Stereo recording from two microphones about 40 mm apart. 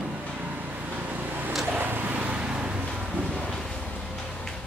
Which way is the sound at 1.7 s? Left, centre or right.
Right.